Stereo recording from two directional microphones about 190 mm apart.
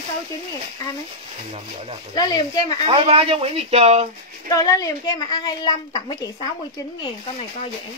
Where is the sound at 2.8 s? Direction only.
30° right (ahead or behind).